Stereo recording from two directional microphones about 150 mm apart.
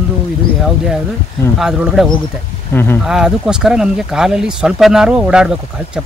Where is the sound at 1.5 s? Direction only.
5° right (ahead or behind).